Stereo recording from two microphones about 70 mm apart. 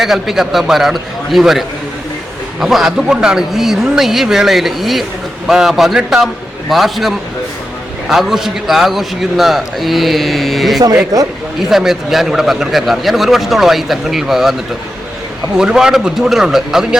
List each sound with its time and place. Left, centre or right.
0.0 s a man's voice: centre
11.1 s speech: right
11.7 s a man's voice: centre
15.5 s speech: centre